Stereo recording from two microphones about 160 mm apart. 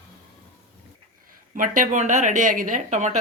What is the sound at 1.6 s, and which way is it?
Speech, 55° right (ahead or behind).